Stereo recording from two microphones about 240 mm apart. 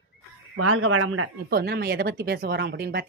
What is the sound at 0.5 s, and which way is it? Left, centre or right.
Speech, right.